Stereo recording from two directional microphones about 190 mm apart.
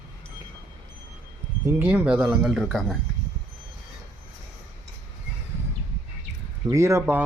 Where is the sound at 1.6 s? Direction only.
10° right (ahead or behind).